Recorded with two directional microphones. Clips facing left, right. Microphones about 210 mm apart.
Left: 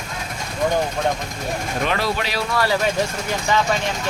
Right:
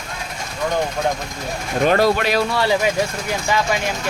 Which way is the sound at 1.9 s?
50° right (ahead or behind).